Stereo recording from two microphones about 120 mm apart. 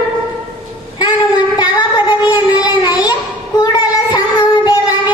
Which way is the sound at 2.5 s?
35° left (ahead or behind).